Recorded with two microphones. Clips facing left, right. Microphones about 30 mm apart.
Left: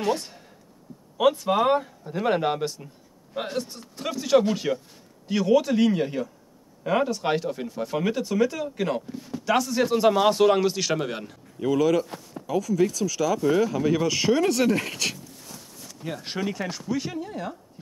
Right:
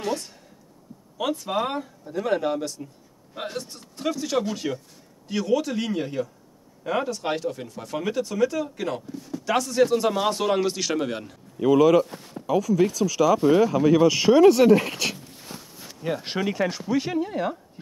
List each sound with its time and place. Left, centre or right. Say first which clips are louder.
0.0 s speech: left 3 dB; centre
3.3 s speech: left 3 dB; centre
9.5 s speech: right 2 dB; centre
11.6 s speech: right 5 dB; centre
15.4 s walk: right 3 dB; right
16.1 s speech: right 4 dB; centre